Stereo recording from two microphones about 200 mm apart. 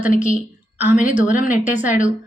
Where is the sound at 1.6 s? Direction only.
10° right (ahead or behind).